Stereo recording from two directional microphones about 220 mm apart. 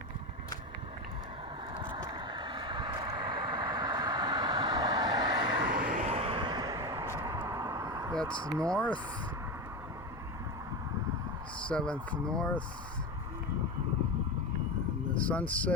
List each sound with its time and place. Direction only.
1.7 s vehicle: 20° right (ahead or behind)
5.5 s vehicle: 50° right (ahead or behind)
5.9 s a sound: 30° right (ahead or behind)
8.4 s speech: 15° right (ahead or behind)
8.7 s speech: 5° left (ahead or behind)
11.7 s speech: 5° left (ahead or behind)
15.1 s speech: 5° left (ahead or behind)